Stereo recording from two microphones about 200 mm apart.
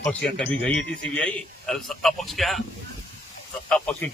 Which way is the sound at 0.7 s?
65° left (ahead or behind).